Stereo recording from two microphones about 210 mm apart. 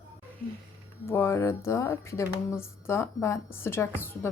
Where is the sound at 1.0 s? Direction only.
10° left (ahead or behind).